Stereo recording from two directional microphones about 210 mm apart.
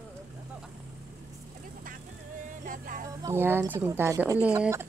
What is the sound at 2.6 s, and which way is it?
Music, 40° right (ahead or behind).